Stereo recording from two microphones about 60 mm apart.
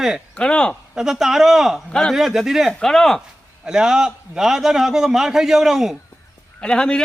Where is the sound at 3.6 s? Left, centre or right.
Centre.